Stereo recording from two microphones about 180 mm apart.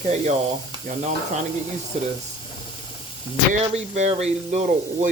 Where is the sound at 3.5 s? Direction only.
40° right (ahead or behind).